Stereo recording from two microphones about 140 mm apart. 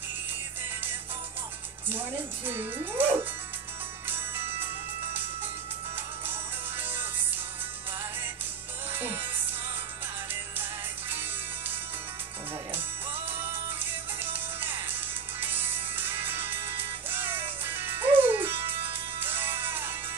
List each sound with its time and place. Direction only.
1.9 s speech: 15° right (ahead or behind)
4.1 s music: 15° right (ahead or behind)
6.8 s music: 15° right (ahead or behind)
8.9 s music: 15° right (ahead or behind)
10.6 s music: 15° right (ahead or behind)
12.7 s music: 15° right (ahead or behind)